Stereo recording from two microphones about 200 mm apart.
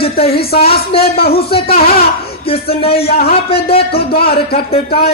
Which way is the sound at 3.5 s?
30° left (ahead or behind).